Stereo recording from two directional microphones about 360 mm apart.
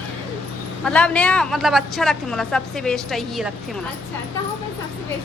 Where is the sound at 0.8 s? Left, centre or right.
Centre.